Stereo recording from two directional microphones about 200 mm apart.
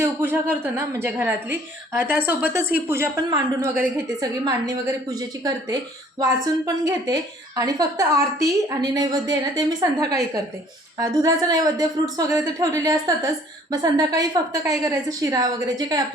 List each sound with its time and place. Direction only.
0.0 s a woman's voice: 10° right (ahead or behind)
6.1 s a woman's voice: 15° right (ahead or behind)